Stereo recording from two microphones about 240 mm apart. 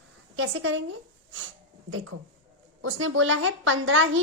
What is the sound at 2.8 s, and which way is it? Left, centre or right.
Speech, right.